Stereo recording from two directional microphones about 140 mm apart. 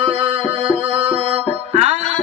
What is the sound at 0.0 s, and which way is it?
Music, 45° right (ahead or behind).